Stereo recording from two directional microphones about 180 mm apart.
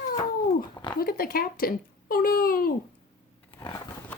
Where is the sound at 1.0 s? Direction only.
55° left (ahead or behind).